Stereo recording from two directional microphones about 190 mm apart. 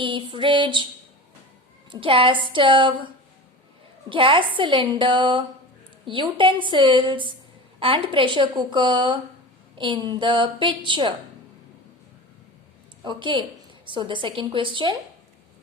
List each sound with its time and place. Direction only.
0.0 s a woman's voice: 25° right (ahead or behind)
1.9 s a woman's voice: 25° right (ahead or behind)
4.1 s a woman's voice: 25° right (ahead or behind)
13.1 s a woman's voice: 25° right (ahead or behind)